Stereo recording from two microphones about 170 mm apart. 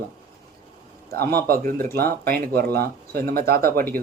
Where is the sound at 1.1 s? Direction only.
65° right (ahead or behind).